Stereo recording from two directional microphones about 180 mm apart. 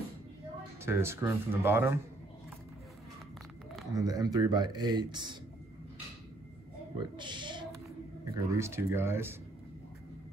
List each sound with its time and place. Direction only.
0.8 s speech: 15° right (ahead or behind)
3.9 s speech: 20° right (ahead or behind)
7.0 s speech: 25° right (ahead or behind)
8.5 s speech: 15° right (ahead or behind)